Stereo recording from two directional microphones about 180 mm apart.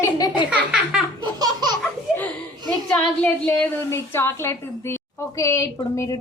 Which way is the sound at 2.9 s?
5° left (ahead or behind).